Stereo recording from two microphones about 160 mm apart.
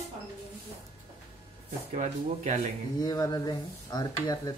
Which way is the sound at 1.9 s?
50° right (ahead or behind).